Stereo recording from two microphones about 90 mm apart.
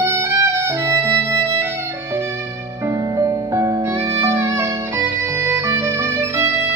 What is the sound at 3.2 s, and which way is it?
Music, 35° right (ahead or behind).